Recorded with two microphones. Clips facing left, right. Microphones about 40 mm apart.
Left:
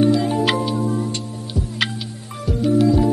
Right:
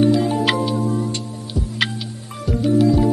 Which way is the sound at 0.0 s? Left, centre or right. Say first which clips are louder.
Right 1 dB; centre.